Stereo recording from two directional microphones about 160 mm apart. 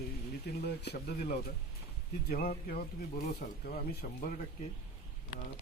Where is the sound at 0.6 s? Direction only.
90° left.